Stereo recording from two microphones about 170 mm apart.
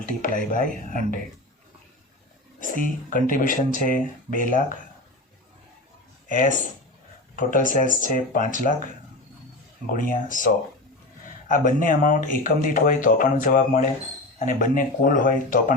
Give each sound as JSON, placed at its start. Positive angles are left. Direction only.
{"t": 0.2, "sound": "speech", "side_deg": 55}
{"t": 2.6, "sound": "speech", "side_deg": 50}
{"t": 6.2, "sound": "speech", "side_deg": 50}
{"t": 9.9, "sound": "speech", "side_deg": 50}